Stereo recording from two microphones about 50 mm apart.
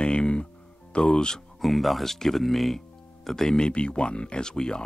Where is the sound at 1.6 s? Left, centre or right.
Centre.